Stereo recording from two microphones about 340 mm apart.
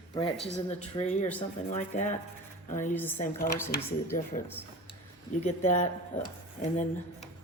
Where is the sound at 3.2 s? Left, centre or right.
Left.